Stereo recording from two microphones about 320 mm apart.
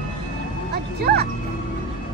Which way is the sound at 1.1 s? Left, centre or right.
Right.